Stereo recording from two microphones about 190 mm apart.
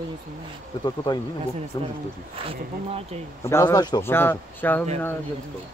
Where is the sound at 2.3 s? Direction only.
30° right (ahead or behind).